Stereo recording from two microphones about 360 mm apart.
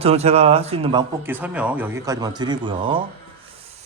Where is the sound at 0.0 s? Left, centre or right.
Centre.